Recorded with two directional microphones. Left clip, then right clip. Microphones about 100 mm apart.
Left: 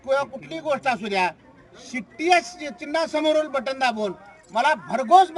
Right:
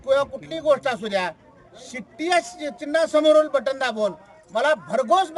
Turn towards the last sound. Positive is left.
turn(degrees=-35)  # may be behind; listen again after turning